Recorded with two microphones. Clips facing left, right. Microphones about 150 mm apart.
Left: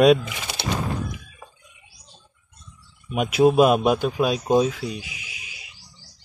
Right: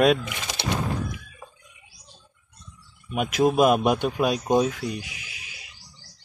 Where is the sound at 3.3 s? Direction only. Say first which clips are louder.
Left 3 dB; 10° left (ahead or behind).